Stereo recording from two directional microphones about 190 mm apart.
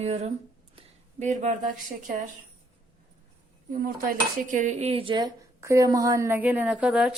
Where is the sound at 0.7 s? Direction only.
40° right (ahead or behind).